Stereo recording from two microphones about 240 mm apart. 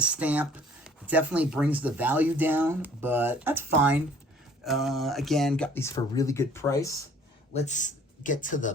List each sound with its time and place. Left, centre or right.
0.0 s speech: centre
7.5 s speech: left